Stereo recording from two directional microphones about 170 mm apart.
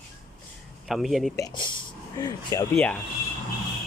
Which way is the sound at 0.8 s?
Centre (ahead or behind).